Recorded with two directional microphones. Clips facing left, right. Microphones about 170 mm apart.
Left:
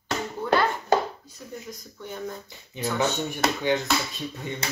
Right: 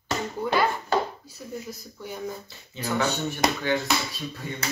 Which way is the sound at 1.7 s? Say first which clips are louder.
Right 1 dB; 10° right (ahead or behind).